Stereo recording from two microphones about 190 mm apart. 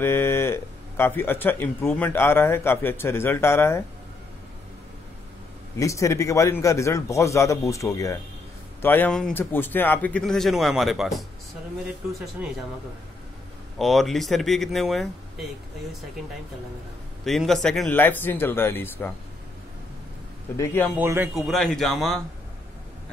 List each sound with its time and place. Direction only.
0.0 s a man's voice: 10° left (ahead or behind)
5.8 s a man's voice: 15° left (ahead or behind); by 11.2 s centre (ahead or behind)
13.7 s speech: centre (ahead or behind)
17.2 s a man's voice: centre (ahead or behind)
20.5 s a man's voice: 10° left (ahead or behind)
20.9 s speech: 10° right (ahead or behind)
21.4 s speech: centre (ahead or behind)